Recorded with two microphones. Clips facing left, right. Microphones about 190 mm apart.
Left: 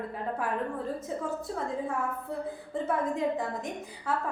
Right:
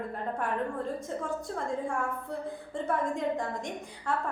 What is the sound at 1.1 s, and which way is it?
A woman's voice, 5° left (ahead or behind).